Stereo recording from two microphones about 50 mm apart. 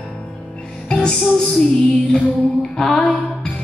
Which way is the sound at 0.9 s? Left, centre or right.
Centre.